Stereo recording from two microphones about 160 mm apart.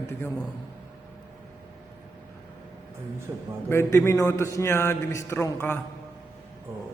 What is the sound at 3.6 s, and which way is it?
A man's voice, 15° left (ahead or behind).